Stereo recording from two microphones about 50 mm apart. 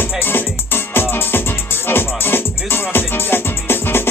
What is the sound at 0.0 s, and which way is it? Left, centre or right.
Music, left.